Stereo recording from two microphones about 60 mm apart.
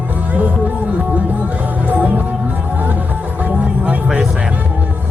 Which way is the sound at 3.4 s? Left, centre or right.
Right.